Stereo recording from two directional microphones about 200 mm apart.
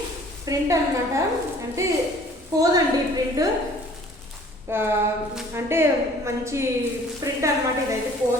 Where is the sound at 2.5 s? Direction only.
15° right (ahead or behind).